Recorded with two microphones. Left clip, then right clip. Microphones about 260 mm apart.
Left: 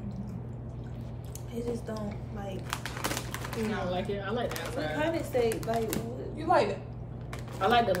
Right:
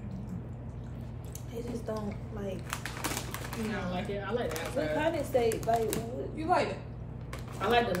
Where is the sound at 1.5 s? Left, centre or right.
Centre.